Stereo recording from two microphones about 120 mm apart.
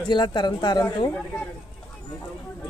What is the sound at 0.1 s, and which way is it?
Speech, 40° left (ahead or behind).